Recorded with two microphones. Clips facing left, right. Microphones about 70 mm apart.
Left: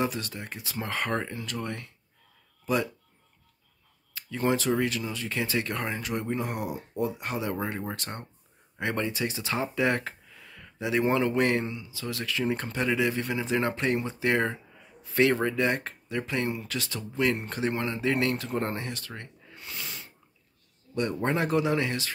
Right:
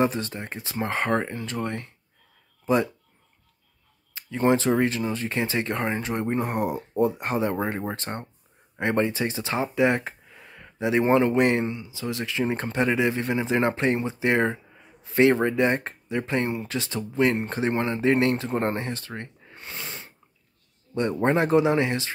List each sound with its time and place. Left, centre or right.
0.0 s speech: right
4.1 s speech: right
7.5 s speech: right